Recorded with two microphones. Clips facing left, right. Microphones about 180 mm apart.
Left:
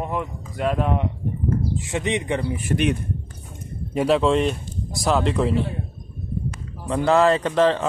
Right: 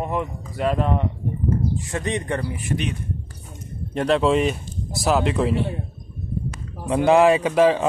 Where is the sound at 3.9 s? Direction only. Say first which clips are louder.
Even; 5° left (ahead or behind).